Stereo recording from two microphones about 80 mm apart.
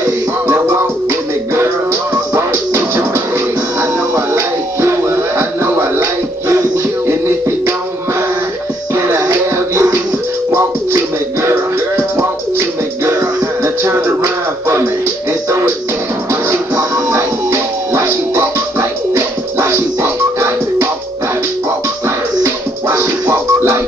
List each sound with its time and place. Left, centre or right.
0.5 s music: right
4.1 s music: right
7.1 s music: right
8.9 s music: right
12.2 s music: right
16.3 s music: right
22.0 s music: right